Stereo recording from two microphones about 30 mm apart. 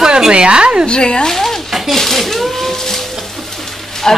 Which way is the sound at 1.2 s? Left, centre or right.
Centre.